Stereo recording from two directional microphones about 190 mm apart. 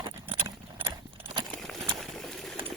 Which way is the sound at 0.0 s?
25° right (ahead or behind).